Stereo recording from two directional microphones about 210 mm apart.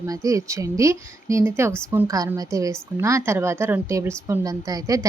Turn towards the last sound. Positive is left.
turn(degrees=-15)  # may be behind; listen again after turning